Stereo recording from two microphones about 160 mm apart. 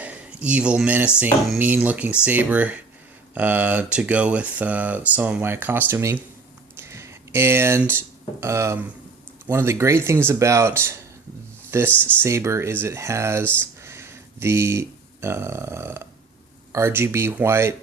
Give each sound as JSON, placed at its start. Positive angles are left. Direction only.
{"t": 0.0, "sound": "speech", "side_deg": -10}
{"t": 11.9, "sound": "speech", "side_deg": 10}
{"t": 12.2, "sound": "speech", "side_deg": -15}
{"t": 13.4, "sound": "speech", "side_deg": 10}
{"t": 13.8, "sound": "speech", "side_deg": -15}